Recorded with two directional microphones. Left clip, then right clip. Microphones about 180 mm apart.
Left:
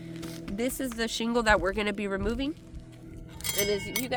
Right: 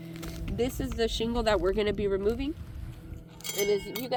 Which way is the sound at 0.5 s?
40° left (ahead or behind).